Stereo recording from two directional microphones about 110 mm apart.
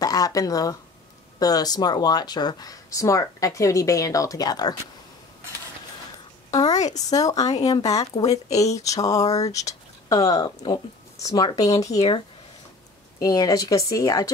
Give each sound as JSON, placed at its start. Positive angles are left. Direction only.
{"t": 0.0, "sound": "speech", "side_deg": 35}
{"t": 6.5, "sound": "speech", "side_deg": 35}
{"t": 13.2, "sound": "speech", "side_deg": 35}